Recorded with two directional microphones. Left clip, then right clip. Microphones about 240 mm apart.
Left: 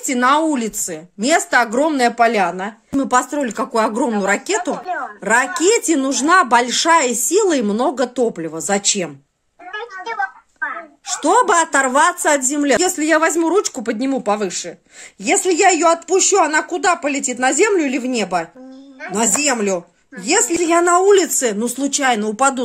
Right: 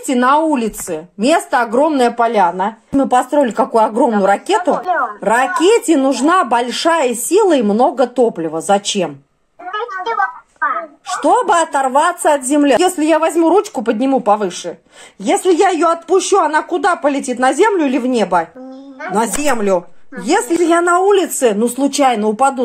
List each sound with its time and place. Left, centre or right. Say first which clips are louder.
0.0 s speech: right 3 dB; left
4.7 s speech: right 8 dB; centre
5.2 s speech: right 1 dB; left
9.7 s a sound: right 7 dB; centre
11.2 s speech: right 1 dB; left